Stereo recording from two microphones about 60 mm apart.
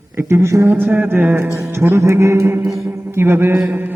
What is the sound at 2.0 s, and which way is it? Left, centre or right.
Mantra, right.